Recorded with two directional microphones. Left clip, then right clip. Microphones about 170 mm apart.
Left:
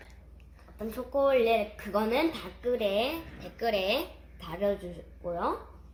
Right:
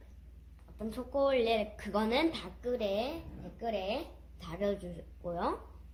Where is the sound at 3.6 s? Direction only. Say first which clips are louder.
Left 7 dB; 65° left (ahead or behind).